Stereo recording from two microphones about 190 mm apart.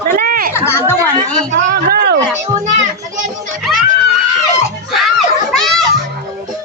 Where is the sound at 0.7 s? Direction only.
15° left (ahead or behind).